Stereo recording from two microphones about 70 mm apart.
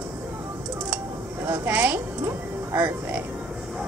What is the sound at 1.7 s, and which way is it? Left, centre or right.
A woman's voice, right.